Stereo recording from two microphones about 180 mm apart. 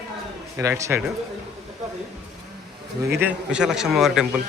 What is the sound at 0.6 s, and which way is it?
Speech, 15° right (ahead or behind).